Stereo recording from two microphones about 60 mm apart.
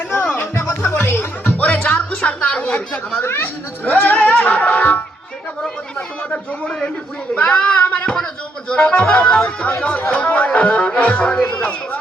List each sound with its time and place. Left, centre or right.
0.1 s music: left
0.5 s music: left
0.9 s music: left
3.2 s speech: left
3.8 s music: left
6.3 s a man's voice: centre
7.9 s a sound: left
8.7 s speech: left
11.5 s a sound: left